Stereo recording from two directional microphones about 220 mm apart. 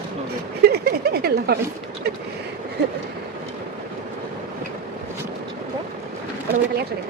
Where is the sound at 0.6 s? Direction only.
45° right (ahead or behind).